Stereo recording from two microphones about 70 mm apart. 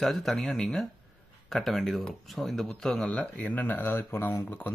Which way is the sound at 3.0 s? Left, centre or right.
Centre.